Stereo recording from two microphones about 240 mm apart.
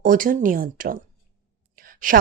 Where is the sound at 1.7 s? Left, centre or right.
Right.